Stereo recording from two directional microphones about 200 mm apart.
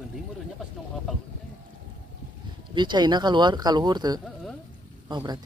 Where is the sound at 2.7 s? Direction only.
20° right (ahead or behind).